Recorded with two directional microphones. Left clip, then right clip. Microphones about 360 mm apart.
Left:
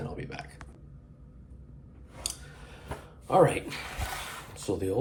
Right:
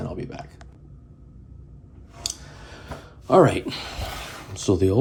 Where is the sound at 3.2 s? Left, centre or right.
Centre.